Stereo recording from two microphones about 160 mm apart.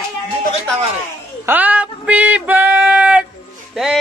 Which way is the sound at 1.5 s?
10° right (ahead or behind).